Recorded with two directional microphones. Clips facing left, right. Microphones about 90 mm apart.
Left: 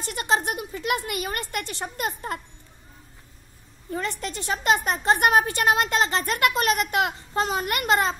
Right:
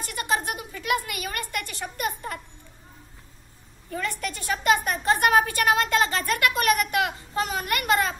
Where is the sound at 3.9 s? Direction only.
25° left (ahead or behind).